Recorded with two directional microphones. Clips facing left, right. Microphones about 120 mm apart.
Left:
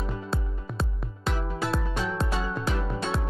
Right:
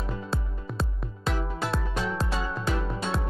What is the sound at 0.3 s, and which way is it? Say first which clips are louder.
Music: even; centre (ahead or behind).